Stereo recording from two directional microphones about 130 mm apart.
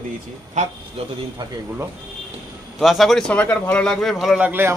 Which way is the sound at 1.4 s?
35° right (ahead or behind).